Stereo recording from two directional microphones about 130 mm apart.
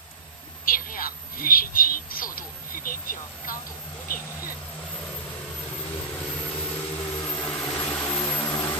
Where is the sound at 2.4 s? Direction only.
90° left.